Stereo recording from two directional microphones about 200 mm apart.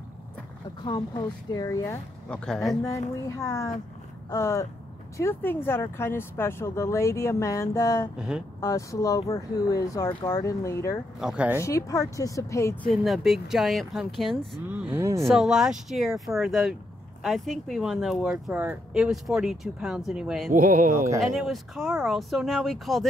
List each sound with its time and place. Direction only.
0.8 s speech: 20° left (ahead or behind); by 2.8 s 5° left (ahead or behind)
3.3 s speech: 15° left (ahead or behind)
8.2 s speech: 5° right (ahead or behind)
8.5 s speech: 15° left (ahead or behind)
11.1 s speech: 5° right (ahead or behind)
11.6 s speech: 15° left (ahead or behind)
12.9 s speech: centre (ahead or behind)
15.2 s speech: centre (ahead or behind)
20.5 s speech: 40° right (ahead or behind)
21.2 s speech: centre (ahead or behind)